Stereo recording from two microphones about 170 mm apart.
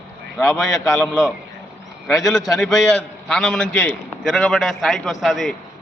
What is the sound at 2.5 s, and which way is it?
A man's voice, centre (ahead or behind).